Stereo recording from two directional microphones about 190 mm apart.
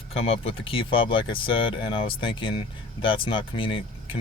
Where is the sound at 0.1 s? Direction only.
30° left (ahead or behind).